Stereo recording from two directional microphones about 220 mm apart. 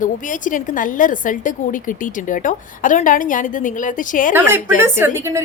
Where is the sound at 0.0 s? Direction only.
35° left (ahead or behind).